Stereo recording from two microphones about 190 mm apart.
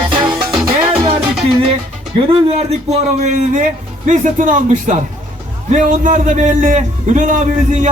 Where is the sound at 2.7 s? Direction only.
35° right (ahead or behind).